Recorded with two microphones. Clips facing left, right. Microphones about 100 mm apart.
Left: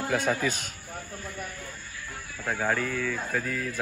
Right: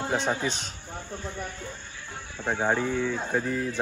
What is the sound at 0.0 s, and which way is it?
A man's voice, 25° right (ahead or behind).